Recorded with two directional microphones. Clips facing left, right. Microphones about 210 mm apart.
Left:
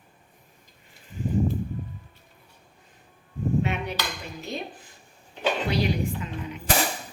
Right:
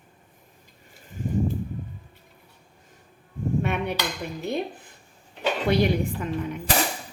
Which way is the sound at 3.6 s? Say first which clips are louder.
Right 2 dB; 55° right (ahead or behind).